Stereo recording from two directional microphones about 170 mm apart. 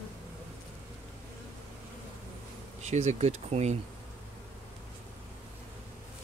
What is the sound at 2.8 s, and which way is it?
Speech, 40° right (ahead or behind).